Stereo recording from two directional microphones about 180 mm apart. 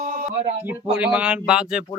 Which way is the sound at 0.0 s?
50° right (ahead or behind).